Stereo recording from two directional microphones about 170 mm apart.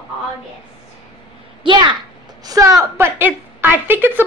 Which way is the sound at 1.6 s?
25° right (ahead or behind).